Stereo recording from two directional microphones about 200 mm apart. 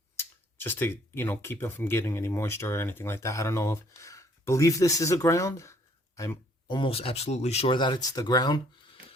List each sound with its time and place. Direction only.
0.2 s speech: 10° left (ahead or behind)